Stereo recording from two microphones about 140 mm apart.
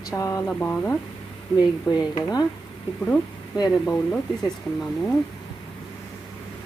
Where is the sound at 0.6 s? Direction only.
15° left (ahead or behind).